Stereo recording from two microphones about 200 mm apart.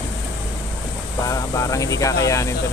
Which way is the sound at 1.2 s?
15° left (ahead or behind).